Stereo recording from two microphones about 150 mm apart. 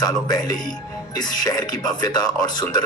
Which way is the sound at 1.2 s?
25° left (ahead or behind).